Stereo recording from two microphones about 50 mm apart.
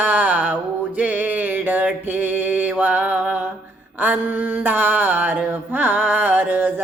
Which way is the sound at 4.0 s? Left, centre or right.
Right.